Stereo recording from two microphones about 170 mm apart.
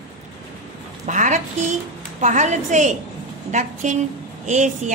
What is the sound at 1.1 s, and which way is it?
A woman's voice, 45° right (ahead or behind).